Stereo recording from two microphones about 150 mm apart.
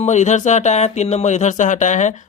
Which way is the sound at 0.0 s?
50° left (ahead or behind).